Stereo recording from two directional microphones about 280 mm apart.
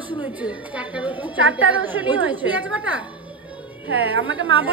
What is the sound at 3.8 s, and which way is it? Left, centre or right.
Speech, right.